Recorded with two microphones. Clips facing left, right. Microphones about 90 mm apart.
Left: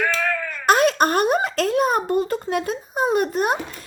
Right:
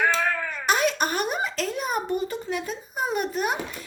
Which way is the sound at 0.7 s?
50° left (ahead or behind).